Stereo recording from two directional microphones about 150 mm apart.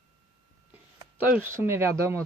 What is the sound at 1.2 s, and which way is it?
Speech, 15° right (ahead or behind).